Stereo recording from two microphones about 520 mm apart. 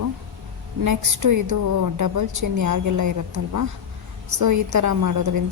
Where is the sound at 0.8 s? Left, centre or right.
Right.